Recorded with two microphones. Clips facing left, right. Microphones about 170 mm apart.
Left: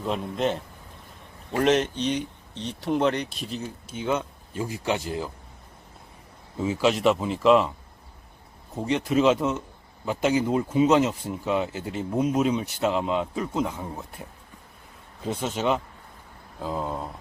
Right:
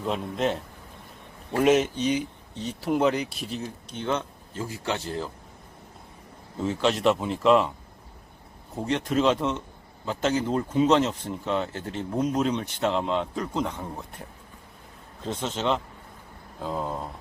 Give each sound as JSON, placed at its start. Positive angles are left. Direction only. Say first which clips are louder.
{"t": 0.0, "sound": "speech", "louder": "even", "side_deg": 0}
{"t": 6.6, "sound": "speech", "louder": "left 2 dB", "side_deg": 5}
{"t": 8.7, "sound": "speech", "louder": "left 2 dB", "side_deg": 0}